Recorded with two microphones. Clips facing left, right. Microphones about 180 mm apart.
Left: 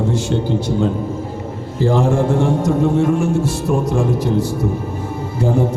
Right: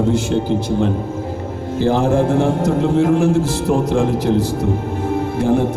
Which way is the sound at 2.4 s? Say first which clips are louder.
Even; 90° right.